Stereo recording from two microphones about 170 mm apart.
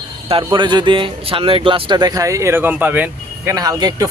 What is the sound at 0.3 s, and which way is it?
Speech, 30° right (ahead or behind).